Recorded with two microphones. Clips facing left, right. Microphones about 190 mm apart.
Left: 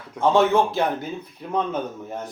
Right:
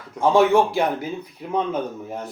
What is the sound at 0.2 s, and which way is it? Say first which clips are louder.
Speech: right 2 dB; 10° right (ahead or behind).